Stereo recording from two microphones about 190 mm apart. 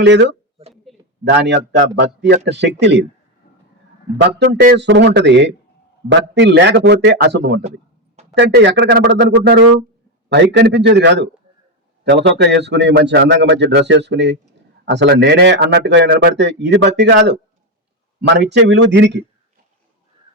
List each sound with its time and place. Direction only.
0.0 s speech: 65° right (ahead or behind)
0.9 s a sound: centre (ahead or behind)
1.3 s speech: 65° right (ahead or behind)
4.2 s speech: 65° right (ahead or behind)
16.0 s speech: 55° right (ahead or behind)